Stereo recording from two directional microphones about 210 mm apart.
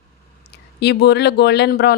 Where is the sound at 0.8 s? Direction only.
50° left (ahead or behind).